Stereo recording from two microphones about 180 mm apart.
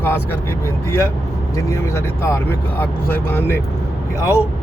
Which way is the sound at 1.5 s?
15° left (ahead or behind).